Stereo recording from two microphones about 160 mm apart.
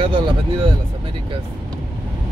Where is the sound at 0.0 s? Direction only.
30° right (ahead or behind).